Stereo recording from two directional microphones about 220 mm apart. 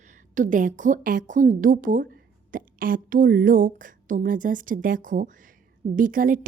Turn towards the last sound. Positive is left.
turn(degrees=-40)  # may be behind; listen again after turning